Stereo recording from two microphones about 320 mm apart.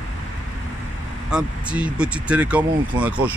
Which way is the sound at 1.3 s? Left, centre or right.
Centre.